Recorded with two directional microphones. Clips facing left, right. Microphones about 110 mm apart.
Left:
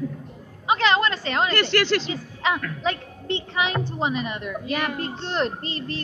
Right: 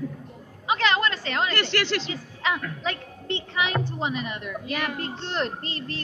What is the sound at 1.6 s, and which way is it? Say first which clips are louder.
Speech: left 4 dB; 45° left (ahead or behind).